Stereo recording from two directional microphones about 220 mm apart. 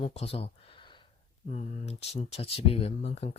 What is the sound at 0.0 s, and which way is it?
Speech, 30° left (ahead or behind).